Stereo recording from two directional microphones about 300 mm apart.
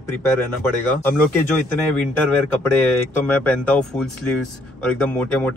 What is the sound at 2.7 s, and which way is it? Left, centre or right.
Speech, centre.